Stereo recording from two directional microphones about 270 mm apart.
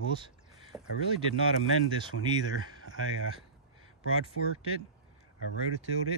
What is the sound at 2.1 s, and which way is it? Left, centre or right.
Speech, left.